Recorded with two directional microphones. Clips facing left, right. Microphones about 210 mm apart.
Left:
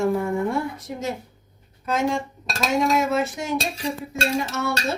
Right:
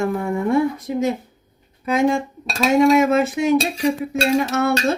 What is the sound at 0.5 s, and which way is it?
Speech, 60° right (ahead or behind).